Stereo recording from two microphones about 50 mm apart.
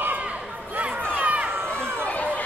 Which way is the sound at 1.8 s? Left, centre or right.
Right.